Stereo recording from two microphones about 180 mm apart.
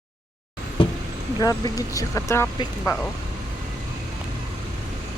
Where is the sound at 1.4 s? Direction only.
20° left (ahead or behind).